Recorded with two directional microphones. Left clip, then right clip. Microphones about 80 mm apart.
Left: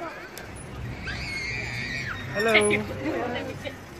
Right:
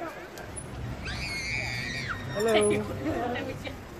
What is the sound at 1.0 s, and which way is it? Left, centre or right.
Screaming, right.